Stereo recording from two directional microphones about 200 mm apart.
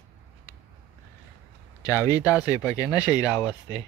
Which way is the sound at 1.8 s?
15° left (ahead or behind).